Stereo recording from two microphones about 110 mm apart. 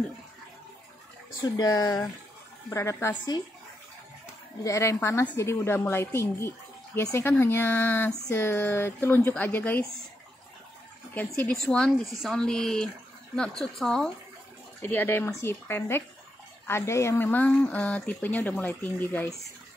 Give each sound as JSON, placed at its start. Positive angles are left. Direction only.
{"t": 1.4, "sound": "speech", "side_deg": 35}
{"t": 4.6, "sound": "speech", "side_deg": 25}
{"t": 11.1, "sound": "speech", "side_deg": 10}
{"t": 14.8, "sound": "speech", "side_deg": 20}